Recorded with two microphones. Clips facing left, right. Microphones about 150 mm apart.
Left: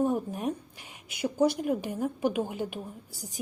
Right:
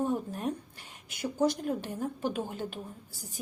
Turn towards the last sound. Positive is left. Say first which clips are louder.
# left 3 dB
turn(degrees=15)  # may be behind; listen again after turning